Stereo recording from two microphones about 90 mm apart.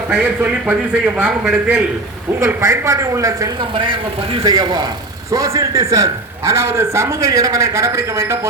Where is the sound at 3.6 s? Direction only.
70° right (ahead or behind).